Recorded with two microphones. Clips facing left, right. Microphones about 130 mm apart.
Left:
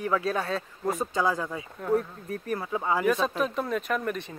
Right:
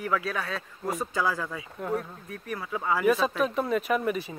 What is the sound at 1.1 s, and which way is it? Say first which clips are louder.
Speech: left 1 dB; 20° left (ahead or behind).